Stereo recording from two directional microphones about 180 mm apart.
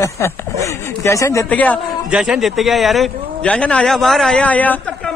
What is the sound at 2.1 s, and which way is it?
A man's voice, 5° right (ahead or behind).